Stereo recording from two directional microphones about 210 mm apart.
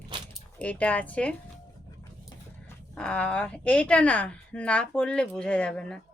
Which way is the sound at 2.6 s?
5° left (ahead or behind).